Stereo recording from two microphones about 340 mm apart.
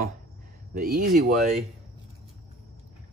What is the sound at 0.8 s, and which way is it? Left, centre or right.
Speech, right.